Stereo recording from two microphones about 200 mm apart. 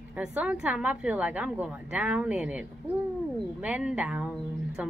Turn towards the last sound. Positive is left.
turn(degrees=-5)  # may be behind; listen again after turning